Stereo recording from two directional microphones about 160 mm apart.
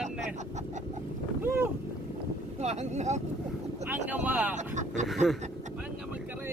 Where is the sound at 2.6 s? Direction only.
45° right (ahead or behind).